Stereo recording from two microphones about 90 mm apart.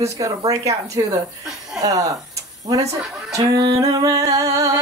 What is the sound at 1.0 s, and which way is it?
Speech, 55° right (ahead or behind).